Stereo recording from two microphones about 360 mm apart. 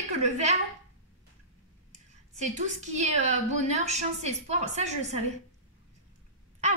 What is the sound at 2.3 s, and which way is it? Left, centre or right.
A woman's voice, centre.